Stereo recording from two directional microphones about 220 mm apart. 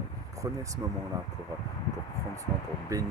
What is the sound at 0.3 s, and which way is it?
Speech, 15° right (ahead or behind).